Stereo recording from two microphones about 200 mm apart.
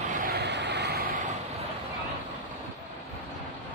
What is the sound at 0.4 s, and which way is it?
Vehicle, 60° right (ahead or behind).